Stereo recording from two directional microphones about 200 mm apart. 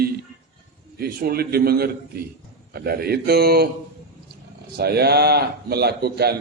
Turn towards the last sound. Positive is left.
turn(degrees=-55)  # may be behind; listen again after turning